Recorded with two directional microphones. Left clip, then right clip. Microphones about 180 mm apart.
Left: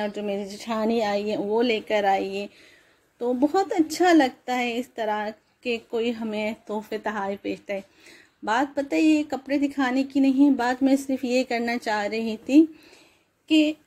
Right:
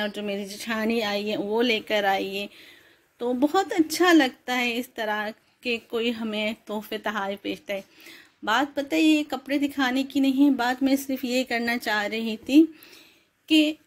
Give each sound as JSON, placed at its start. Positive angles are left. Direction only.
{"t": 0.0, "sound": "a woman's voice", "side_deg": 0}
{"t": 10.9, "sound": "speech", "side_deg": 15}
{"t": 11.1, "sound": "a woman's voice", "side_deg": 0}